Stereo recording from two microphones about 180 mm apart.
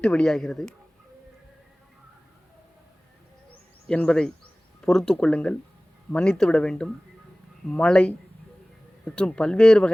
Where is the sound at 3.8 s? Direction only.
5° left (ahead or behind).